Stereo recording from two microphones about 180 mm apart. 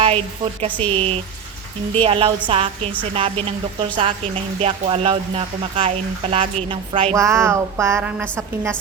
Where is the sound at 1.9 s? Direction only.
30° right (ahead or behind).